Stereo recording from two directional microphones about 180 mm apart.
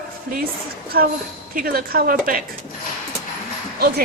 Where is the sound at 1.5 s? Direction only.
55° right (ahead or behind).